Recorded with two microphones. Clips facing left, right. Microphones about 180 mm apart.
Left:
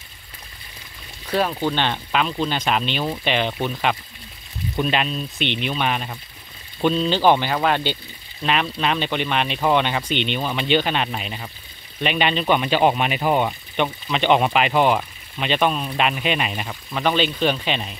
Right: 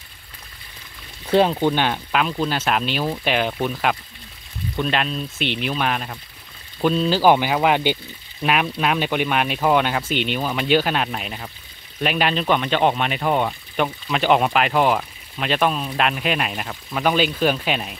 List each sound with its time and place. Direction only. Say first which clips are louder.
1.2 s speech: right 5 dB; 25° right (ahead or behind)
1.7 s speech: right 2 dB; 10° right (ahead or behind)